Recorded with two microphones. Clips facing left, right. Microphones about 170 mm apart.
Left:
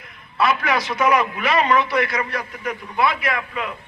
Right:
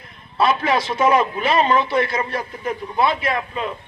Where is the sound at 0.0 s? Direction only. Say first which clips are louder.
Right 2 dB; 30° right (ahead or behind).